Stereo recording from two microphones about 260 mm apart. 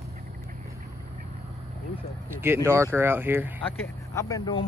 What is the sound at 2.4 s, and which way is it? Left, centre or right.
Speech, centre.